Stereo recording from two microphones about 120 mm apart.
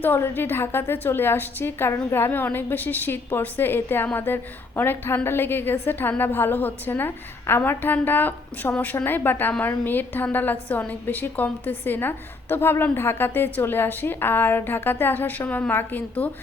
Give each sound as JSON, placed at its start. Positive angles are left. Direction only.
{"t": 0.0, "sound": "a woman's voice", "side_deg": 15}